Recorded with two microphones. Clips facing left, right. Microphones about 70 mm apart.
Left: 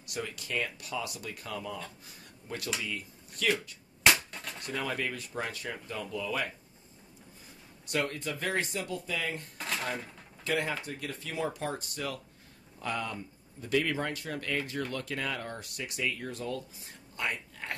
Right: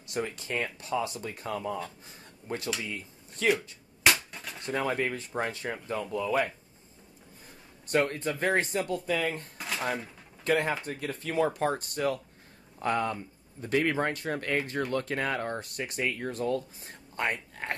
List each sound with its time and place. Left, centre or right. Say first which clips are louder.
0.0 s speech: right 5 dB; right
4.0 s a sound: even; centre
4.6 s speech: right 5 dB; right
7.8 s speech: right 5 dB; right
9.6 s dishes: left 2 dB; centre
10.4 s speech: right 5 dB; right